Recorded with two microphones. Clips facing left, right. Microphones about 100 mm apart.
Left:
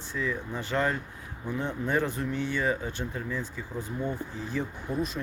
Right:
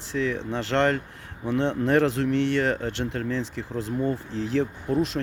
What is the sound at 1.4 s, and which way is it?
Speech, 90° right.